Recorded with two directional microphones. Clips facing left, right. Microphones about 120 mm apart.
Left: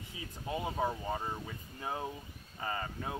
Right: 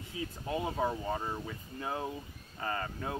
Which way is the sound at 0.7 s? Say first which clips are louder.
Right 2 dB; 5° left (ahead or behind).